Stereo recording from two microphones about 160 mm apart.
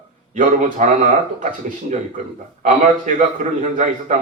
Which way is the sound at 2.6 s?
55° right (ahead or behind).